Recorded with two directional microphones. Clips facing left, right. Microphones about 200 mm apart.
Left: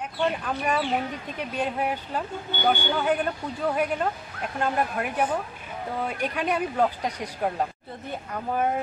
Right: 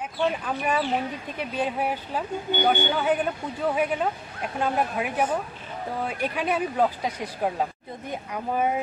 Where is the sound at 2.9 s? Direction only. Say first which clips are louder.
Right 1 dB; 5° right (ahead or behind).